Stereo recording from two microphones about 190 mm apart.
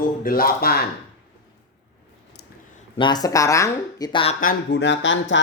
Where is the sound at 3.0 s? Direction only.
20° left (ahead or behind).